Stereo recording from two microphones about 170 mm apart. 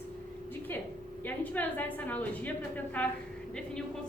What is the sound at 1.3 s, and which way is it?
A woman's voice, 10° left (ahead or behind).